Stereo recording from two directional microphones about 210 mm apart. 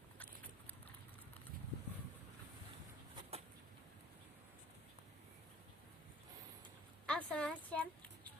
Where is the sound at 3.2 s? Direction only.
30° right (ahead or behind).